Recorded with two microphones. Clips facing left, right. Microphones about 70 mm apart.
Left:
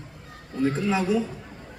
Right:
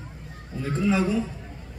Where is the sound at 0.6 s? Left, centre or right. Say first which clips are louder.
Even; left.